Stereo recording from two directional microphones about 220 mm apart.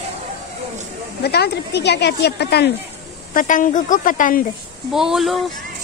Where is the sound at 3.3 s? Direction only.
35° left (ahead or behind).